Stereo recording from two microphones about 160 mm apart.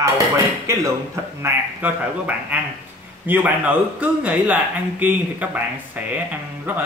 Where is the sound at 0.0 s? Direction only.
20° right (ahead or behind).